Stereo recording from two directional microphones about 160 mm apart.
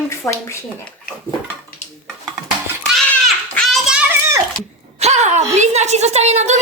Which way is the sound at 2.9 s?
Centre (ahead or behind).